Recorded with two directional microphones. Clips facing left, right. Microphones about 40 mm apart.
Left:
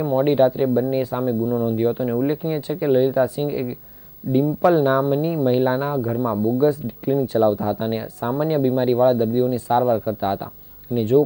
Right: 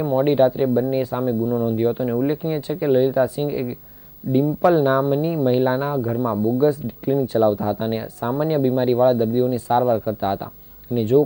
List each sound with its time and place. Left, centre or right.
0.0 s speech: centre